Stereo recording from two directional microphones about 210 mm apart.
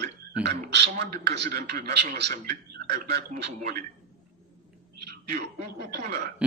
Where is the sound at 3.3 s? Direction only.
35° right (ahead or behind).